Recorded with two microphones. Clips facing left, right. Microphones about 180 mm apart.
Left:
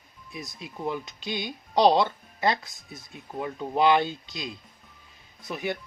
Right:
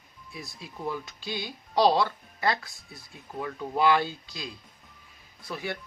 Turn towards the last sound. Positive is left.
turn(degrees=20)  # may be behind; listen again after turning